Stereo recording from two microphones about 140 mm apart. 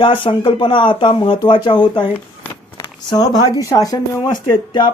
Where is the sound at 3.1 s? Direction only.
25° left (ahead or behind).